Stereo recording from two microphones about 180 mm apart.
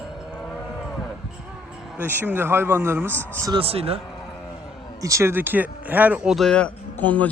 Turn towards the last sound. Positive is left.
turn(degrees=10)  # may be behind; listen again after turning